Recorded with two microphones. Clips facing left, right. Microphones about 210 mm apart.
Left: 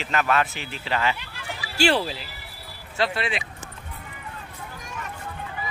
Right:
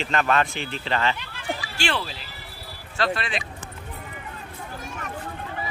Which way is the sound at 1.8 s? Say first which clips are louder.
Left 8 dB; 40° left (ahead or behind).